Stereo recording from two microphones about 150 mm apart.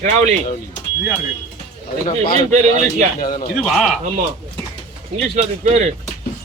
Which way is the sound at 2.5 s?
50° right (ahead or behind).